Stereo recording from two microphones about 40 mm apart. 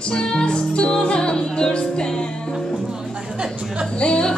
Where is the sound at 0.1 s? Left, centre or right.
Left.